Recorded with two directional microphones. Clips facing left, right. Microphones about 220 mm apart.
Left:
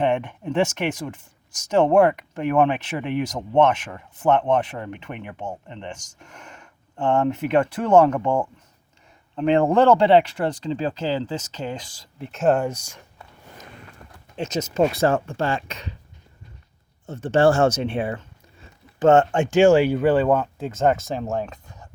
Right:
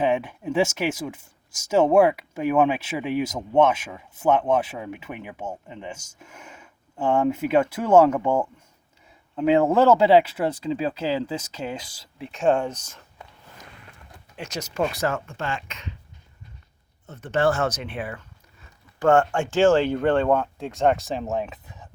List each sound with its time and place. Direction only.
0.0 s speech: 5° right (ahead or behind); by 13.0 s 10° left (ahead or behind)
14.3 s speech: 25° left (ahead or behind)
17.1 s speech: 30° left (ahead or behind); by 21.8 s 5° right (ahead or behind)